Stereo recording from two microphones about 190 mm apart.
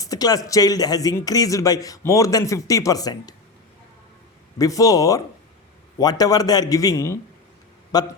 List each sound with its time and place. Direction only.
0.0 s speech: 20° left (ahead or behind)
4.5 s a man's voice: 20° left (ahead or behind)